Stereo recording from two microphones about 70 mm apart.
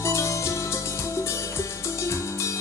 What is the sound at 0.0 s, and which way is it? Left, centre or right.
Music, left.